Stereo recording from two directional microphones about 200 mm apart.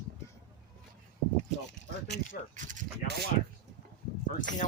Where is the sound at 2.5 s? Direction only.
40° right (ahead or behind).